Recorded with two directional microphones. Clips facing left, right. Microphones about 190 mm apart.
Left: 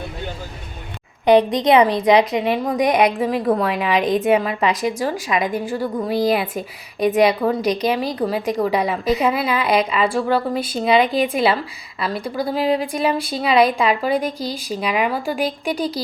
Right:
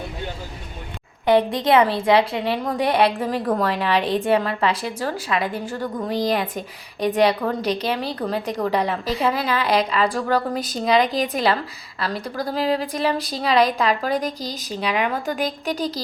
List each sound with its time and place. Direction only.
1.2 s a woman's voice: 20° left (ahead or behind)